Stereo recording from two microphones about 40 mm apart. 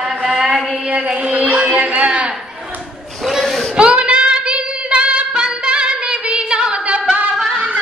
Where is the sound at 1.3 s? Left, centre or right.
Right.